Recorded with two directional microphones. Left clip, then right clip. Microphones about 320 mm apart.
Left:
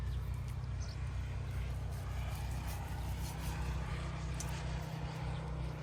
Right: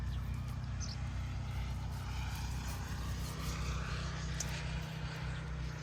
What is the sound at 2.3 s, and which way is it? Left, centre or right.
Vehicle, left.